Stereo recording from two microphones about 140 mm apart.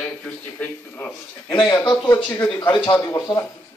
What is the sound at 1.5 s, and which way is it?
Speech, 30° left (ahead or behind).